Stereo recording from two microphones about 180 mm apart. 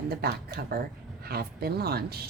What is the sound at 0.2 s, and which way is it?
Speech, 55° right (ahead or behind).